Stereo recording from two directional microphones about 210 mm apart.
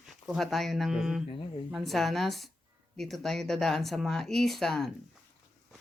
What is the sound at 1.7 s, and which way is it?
Speech, centre (ahead or behind).